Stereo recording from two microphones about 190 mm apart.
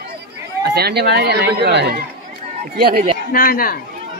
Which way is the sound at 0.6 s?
60° right (ahead or behind).